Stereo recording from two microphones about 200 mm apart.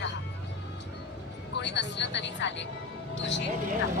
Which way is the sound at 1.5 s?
60° left (ahead or behind).